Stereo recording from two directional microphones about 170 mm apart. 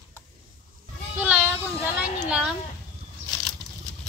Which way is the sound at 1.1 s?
5° right (ahead or behind).